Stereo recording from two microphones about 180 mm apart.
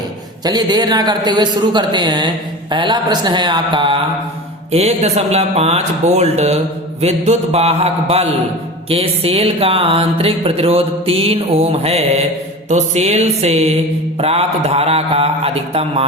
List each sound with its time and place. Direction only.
0.4 s a man's voice: 20° right (ahead or behind)
4.7 s music: 35° right (ahead or behind)